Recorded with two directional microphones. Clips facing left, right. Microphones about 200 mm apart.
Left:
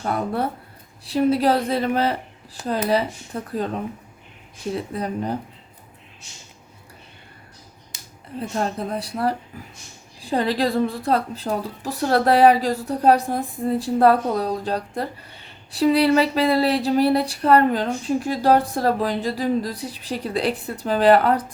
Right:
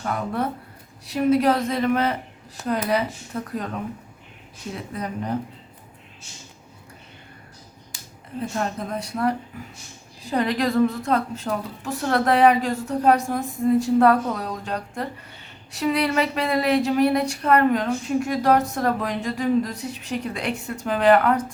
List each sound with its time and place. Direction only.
0.0 s speech: 35° left (ahead or behind)
4.7 s speech: 30° left (ahead or behind)
8.4 s speech: 30° left (ahead or behind)